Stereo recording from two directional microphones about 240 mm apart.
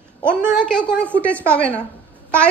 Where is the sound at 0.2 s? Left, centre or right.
Centre.